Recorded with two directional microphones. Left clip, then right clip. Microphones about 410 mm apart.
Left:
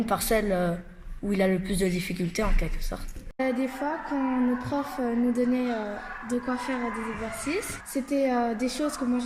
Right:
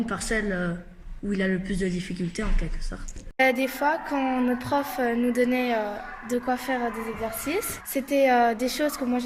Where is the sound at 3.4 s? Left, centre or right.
Right.